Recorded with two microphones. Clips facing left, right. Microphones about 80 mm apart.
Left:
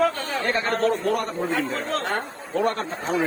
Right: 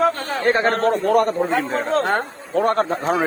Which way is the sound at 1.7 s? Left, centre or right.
Right.